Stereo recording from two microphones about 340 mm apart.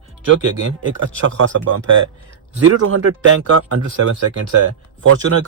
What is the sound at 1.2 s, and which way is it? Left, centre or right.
A man's voice, right.